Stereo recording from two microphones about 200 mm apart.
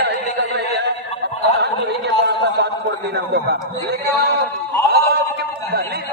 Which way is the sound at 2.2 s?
60° right (ahead or behind).